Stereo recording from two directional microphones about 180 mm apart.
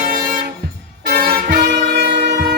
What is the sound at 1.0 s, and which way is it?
Vehicle, 60° right (ahead or behind).